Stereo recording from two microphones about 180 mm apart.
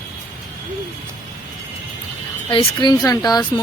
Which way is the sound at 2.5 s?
25° left (ahead or behind).